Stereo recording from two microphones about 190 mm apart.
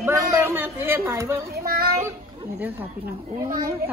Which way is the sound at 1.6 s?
50° right (ahead or behind).